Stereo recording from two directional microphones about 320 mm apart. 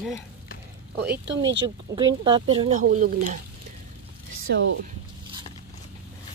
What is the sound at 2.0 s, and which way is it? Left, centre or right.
Speech, centre.